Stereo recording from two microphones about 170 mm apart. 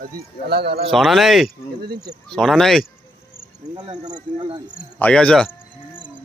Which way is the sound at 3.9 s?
45° right (ahead or behind).